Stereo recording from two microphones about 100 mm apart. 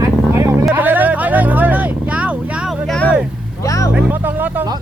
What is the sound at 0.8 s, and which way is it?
Vehicle, 20° right (ahead or behind).